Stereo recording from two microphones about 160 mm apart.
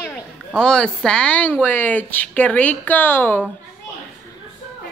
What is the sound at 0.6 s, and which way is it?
Speech, 5° left (ahead or behind).